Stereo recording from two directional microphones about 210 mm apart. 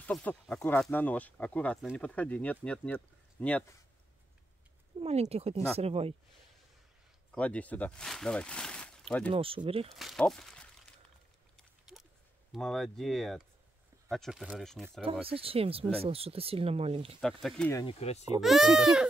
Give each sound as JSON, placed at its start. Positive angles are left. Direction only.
{"t": 0.0, "sound": "speech", "side_deg": 5}
{"t": 5.0, "sound": "speech", "side_deg": -30}
{"t": 7.3, "sound": "speech", "side_deg": 5}
{"t": 9.3, "sound": "speech", "side_deg": -25}
{"t": 9.9, "sound": "speech", "side_deg": 0}
{"t": 12.5, "sound": "speech", "side_deg": 0}
{"t": 15.2, "sound": "speech", "side_deg": -25}
{"t": 17.2, "sound": "speech", "side_deg": 0}
{"t": 17.7, "sound": "speech", "side_deg": 25}
{"t": 18.4, "sound": "speech", "side_deg": 0}